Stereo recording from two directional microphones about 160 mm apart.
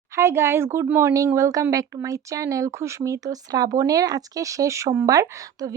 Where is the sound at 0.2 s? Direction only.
15° right (ahead or behind).